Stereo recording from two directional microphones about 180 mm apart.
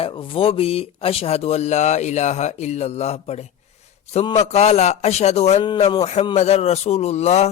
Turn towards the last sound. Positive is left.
turn(degrees=35)  # may be behind; listen again after turning